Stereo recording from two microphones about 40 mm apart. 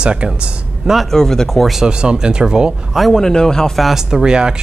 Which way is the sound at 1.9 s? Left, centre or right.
Right.